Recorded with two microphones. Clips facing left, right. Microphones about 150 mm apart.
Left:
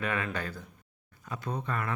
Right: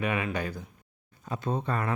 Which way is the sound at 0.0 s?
15° right (ahead or behind).